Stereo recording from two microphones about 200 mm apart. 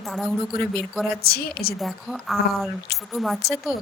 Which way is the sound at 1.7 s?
Centre (ahead or behind).